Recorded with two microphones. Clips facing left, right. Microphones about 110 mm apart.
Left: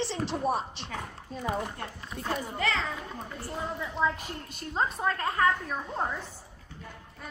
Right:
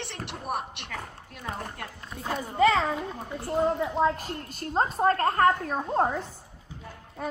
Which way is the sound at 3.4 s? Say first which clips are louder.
Right 11 dB; 45° right (ahead or behind).